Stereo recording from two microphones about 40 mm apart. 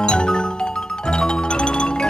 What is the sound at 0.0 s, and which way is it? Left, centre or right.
Music, left.